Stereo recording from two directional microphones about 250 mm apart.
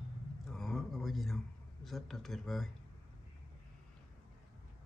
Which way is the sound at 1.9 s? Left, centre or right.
Centre.